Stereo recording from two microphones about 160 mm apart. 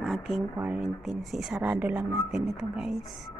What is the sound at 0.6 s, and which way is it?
Speech, 5° right (ahead or behind).